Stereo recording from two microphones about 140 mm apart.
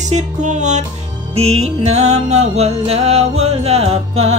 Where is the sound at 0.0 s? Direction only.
60° right (ahead or behind).